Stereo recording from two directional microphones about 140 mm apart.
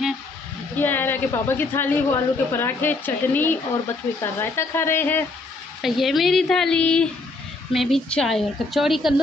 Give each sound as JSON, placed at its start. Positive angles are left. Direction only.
{"t": 0.7, "sound": "a woman's voice", "side_deg": 15}
{"t": 5.8, "sound": "a woman's voice", "side_deg": 0}